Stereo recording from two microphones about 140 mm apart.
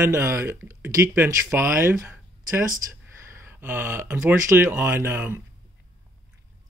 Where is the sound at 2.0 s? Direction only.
15° right (ahead or behind).